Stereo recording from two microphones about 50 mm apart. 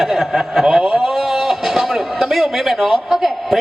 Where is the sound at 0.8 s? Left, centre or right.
Right.